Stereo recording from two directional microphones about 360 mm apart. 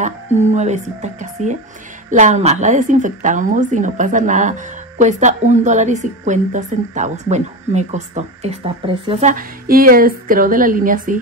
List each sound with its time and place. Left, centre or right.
0.0 s a woman's voice: centre